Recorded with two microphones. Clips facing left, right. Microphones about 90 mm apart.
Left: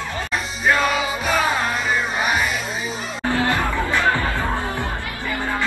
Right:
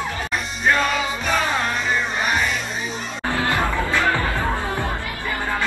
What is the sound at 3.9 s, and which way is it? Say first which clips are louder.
Music: left 2 dB; 20° left (ahead or behind).